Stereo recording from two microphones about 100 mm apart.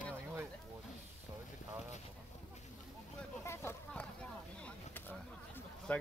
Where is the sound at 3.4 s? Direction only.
25° left (ahead or behind).